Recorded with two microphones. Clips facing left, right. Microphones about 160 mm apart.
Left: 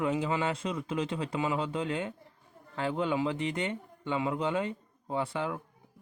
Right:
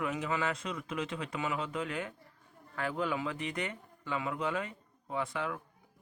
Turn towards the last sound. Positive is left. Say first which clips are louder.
# left 3 dB
turn(degrees=30)  # may be behind; listen again after turning